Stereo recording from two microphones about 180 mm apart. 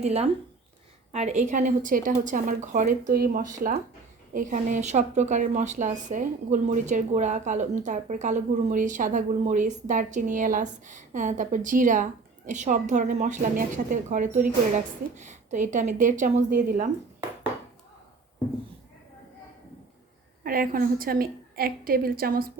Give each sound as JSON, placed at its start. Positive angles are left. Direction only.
{"t": 0.0, "sound": "a woman's voice", "side_deg": -35}
{"t": 20.4, "sound": "a woman's voice", "side_deg": -50}